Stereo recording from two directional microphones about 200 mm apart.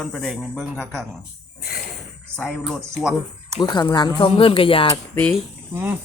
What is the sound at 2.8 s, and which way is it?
Speech, 15° right (ahead or behind).